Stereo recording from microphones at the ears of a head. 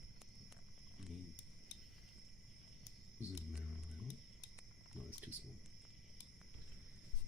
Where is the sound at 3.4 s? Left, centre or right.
Left.